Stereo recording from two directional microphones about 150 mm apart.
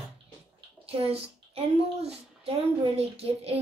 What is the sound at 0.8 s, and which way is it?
Speech, 40° right (ahead or behind).